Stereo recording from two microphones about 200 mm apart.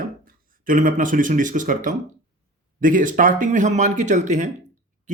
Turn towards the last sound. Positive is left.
turn(degrees=-35)  # may be behind; listen again after turning